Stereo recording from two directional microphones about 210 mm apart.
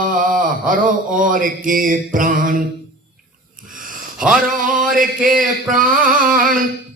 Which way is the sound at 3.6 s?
40° right (ahead or behind).